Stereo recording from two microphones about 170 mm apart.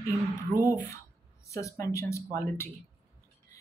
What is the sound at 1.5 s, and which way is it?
Speech, 15° left (ahead or behind).